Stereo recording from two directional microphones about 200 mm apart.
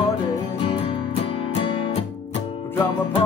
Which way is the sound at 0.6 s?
25° left (ahead or behind).